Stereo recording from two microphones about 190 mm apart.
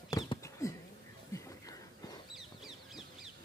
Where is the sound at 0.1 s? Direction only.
15° left (ahead or behind).